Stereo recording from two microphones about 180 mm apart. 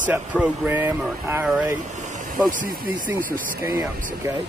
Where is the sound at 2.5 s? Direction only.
45° right (ahead or behind).